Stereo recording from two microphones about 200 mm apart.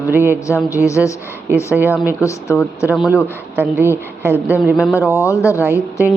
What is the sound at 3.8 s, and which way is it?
Speech, 10° left (ahead or behind).